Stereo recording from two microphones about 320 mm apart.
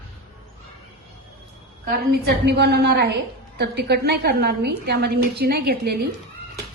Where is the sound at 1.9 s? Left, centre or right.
Right.